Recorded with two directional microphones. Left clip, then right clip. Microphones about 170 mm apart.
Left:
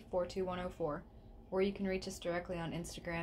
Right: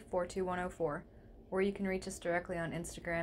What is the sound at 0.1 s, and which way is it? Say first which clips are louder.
A woman's voice: right 1 dB; 15° right (ahead or behind).